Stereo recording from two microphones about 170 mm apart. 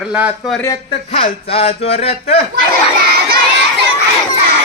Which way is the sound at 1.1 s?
35° left (ahead or behind).